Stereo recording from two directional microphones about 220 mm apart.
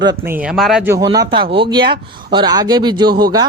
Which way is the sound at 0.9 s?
15° right (ahead or behind).